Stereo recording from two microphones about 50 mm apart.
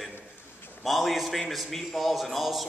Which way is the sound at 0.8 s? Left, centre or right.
Centre.